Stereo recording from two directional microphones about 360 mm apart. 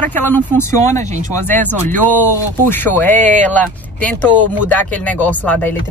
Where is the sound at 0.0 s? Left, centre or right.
Centre.